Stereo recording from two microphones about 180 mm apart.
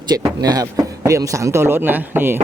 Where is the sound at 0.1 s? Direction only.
20° right (ahead or behind).